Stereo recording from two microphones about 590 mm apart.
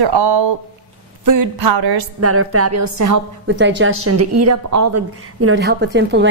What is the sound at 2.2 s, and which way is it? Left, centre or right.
A woman's voice, right.